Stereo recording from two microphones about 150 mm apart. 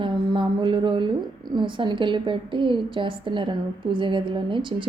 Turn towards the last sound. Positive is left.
turn(degrees=-35)  # may be behind; listen again after turning